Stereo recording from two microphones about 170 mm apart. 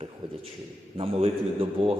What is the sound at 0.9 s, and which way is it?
A man's voice, 35° right (ahead or behind).